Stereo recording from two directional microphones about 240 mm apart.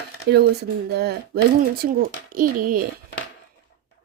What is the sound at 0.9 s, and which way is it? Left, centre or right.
Speech, right.